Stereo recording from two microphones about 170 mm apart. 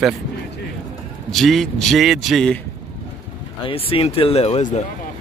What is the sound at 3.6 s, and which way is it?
Speech, 35° left (ahead or behind).